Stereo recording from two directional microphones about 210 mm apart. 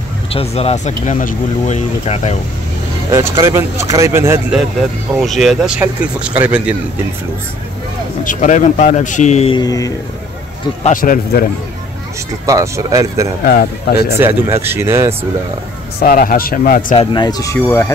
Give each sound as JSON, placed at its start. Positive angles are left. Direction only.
{"t": 0.3, "sound": "speech", "side_deg": 30}
{"t": 3.1, "sound": "speech", "side_deg": -15}
{"t": 5.2, "sound": "speech", "side_deg": 0}
{"t": 8.2, "sound": "speech", "side_deg": 40}
{"t": 9.6, "sound": "speech", "side_deg": 15}
{"t": 10.8, "sound": "speech", "side_deg": 40}
{"t": 12.4, "sound": "speech", "side_deg": -15}
{"t": 13.5, "sound": "speech", "side_deg": 50}
{"t": 14.2, "sound": "speech", "side_deg": -10}
{"t": 16.0, "sound": "speech", "side_deg": 45}
{"t": 16.9, "sound": "speech", "side_deg": 25}